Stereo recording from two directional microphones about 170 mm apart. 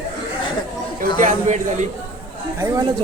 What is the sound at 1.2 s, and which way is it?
Speech, 45° right (ahead or behind).